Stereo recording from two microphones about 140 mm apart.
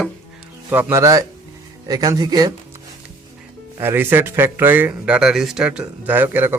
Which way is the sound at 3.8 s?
15° right (ahead or behind).